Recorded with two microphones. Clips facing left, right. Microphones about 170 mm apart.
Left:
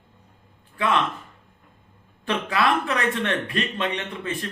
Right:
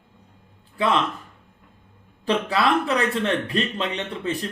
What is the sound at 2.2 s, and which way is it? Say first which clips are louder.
Speech: right 2 dB; 30° right (ahead or behind).